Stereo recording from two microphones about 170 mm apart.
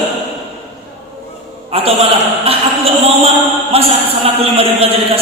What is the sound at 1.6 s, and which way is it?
Speech, 35° right (ahead or behind).